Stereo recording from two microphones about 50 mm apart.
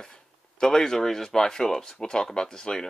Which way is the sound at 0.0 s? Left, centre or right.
Centre.